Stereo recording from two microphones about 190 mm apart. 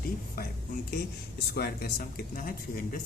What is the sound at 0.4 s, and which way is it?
Speech, 50° left (ahead or behind).